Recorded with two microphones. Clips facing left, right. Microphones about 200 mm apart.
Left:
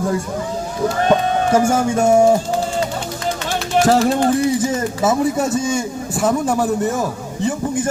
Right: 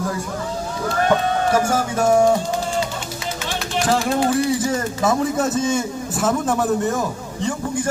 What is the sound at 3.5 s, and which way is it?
Music, 45° left (ahead or behind).